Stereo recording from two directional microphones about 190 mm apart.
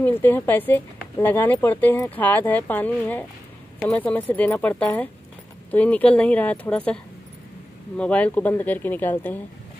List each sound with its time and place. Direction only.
0.0 s speech: 10° left (ahead or behind)
8.0 s speech: 5° left (ahead or behind)